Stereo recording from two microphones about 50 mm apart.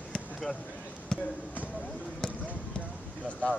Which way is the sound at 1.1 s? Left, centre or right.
Centre.